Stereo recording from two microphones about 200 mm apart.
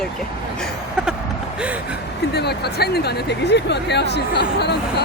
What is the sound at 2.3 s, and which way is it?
Speech, 55° left (ahead or behind).